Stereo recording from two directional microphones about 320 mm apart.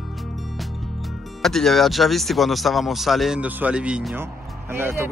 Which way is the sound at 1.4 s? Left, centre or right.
Centre.